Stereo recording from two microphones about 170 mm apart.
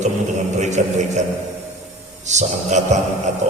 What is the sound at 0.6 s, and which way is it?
Speech, 45° right (ahead or behind).